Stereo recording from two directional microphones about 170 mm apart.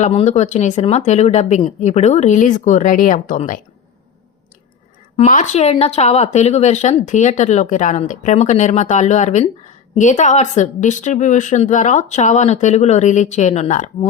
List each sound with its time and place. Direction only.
0.0 s speech: 40° left (ahead or behind)
5.1 s speech: 45° left (ahead or behind)